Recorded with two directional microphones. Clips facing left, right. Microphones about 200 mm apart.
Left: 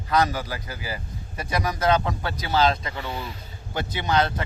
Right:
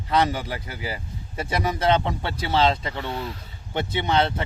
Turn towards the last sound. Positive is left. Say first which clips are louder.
# right 1 dB
turn(degrees=-25)  # may be behind; listen again after turning